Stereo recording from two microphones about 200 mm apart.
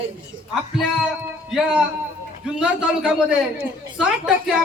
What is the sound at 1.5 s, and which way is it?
A man's voice, 5° right (ahead or behind).